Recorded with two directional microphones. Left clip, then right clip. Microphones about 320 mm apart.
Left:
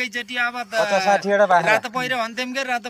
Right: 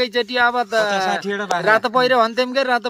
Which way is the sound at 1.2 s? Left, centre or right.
Centre.